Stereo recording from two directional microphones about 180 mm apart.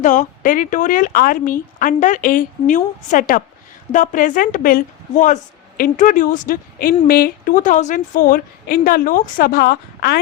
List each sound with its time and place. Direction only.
0.0 s a woman's voice: 45° left (ahead or behind); by 10.2 s 60° left (ahead or behind)